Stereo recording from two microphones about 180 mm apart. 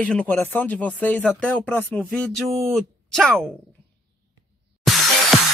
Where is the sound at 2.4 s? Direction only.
15° right (ahead or behind).